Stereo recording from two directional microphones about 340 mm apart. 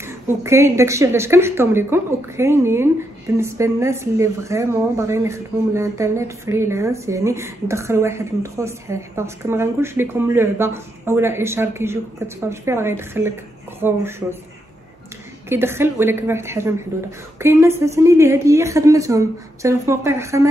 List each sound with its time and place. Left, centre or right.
0.0 s speech: centre
15.5 s speech: centre